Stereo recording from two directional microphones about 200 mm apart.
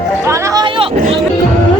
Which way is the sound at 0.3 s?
15° right (ahead or behind).